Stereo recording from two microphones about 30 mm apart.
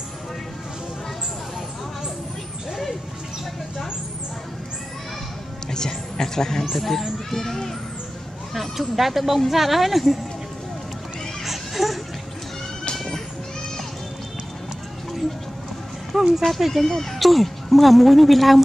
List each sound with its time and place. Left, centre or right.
5.7 s speech: left
6.7 s a woman's voice: centre
8.5 s a woman's voice: centre
11.4 s music: centre
12.9 s a sound: centre
16.2 s a sound: centre
16.4 s a woman's voice: centre
16.8 s speech: centre
17.2 s a woman's voice: centre